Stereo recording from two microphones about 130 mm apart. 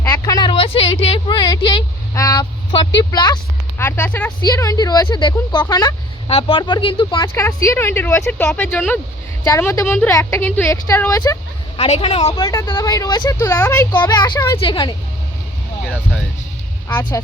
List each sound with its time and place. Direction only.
0.0 s speech: 30° left (ahead or behind)
3.8 s speech: 15° left (ahead or behind)
4.4 s speech: 30° left (ahead or behind)
6.2 s speech: 45° left (ahead or behind)
7.3 s a woman's voice: 20° left (ahead or behind)
11.8 s a woman's voice: 50° left (ahead or behind)
12.4 s a woman's voice: 25° left (ahead or behind)
14.6 s speech: 35° left (ahead or behind)